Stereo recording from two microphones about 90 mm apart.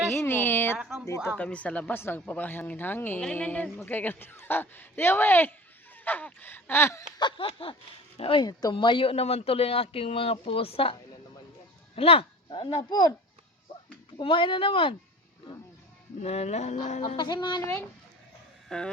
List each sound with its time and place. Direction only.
0.2 s speech: 25° left (ahead or behind)
0.8 s speech: 5° right (ahead or behind)
1.0 s speech: 35° left (ahead or behind)
1.4 s speech: 15° left (ahead or behind)
7.2 s a sound: 70° left (ahead or behind)
8.2 s speech: 75° left (ahead or behind)
11.9 s speech: 90° left; by 13.1 s 60° left (ahead or behind)
14.2 s speech: 65° left (ahead or behind)
16.7 s music: 55° left (ahead or behind)
18.7 s speech: 5° left (ahead or behind)